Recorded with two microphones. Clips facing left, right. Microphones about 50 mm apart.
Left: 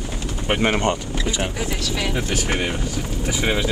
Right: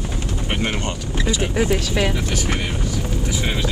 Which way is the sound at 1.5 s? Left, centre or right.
Right.